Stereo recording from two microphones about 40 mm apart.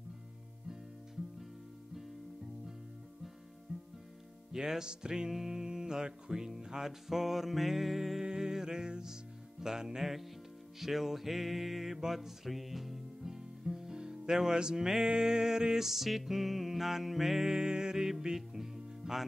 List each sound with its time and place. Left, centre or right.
3.7 s music: centre
4.5 s music: centre
8.2 s music: centre